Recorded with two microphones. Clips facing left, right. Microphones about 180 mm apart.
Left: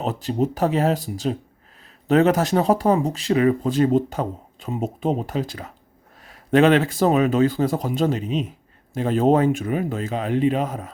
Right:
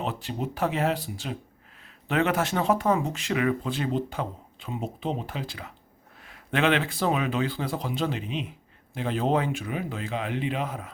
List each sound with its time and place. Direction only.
0.0 s speech: 40° left (ahead or behind)